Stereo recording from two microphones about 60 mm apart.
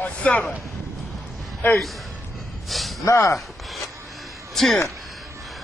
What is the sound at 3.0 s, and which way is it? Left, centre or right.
Speech, left.